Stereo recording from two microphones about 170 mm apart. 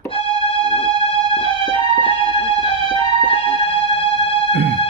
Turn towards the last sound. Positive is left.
turn(degrees=30)  # may be behind; listen again after turning